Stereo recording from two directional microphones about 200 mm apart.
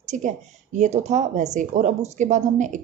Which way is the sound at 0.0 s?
35° right (ahead or behind).